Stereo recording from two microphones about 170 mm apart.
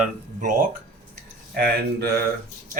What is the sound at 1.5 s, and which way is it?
Speech, 65° right (ahead or behind).